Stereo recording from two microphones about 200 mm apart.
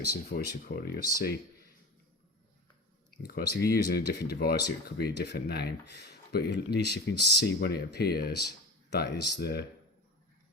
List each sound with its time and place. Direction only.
0.3 s speech: 50° left (ahead or behind)
3.2 s speech: 50° left (ahead or behind)